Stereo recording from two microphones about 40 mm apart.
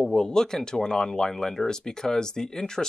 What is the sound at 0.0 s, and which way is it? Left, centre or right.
Speech, centre.